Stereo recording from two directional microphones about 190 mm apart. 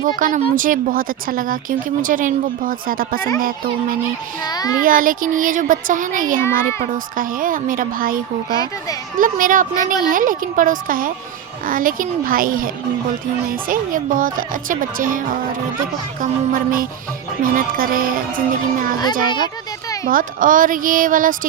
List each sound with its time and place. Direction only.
0.0 s speech: 45° right (ahead or behind)
4.4 s a child's voice: 20° left (ahead or behind)
4.8 s speech: 45° right (ahead or behind)
6.4 s a child's voice: 15° left (ahead or behind)
6.8 s speech: 45° right (ahead or behind)
16.2 s speech: 50° right (ahead or behind)
20.1 s speech: 45° right (ahead or behind)